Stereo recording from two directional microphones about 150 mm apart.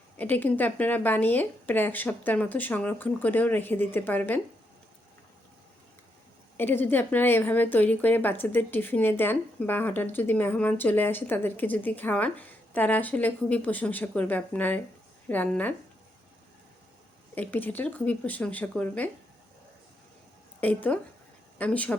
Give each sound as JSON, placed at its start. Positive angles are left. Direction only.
{"t": 0.2, "sound": "a woman's voice", "side_deg": 10}
{"t": 6.6, "sound": "a woman's voice", "side_deg": 15}
{"t": 17.3, "sound": "a woman's voice", "side_deg": 10}
{"t": 20.6, "sound": "a woman's voice", "side_deg": 10}